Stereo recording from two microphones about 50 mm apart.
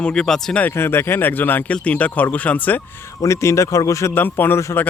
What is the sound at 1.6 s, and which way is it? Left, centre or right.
Speech, left.